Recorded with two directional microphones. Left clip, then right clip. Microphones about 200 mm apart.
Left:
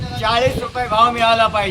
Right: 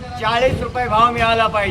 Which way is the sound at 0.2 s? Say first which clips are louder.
Even; 5° right (ahead or behind).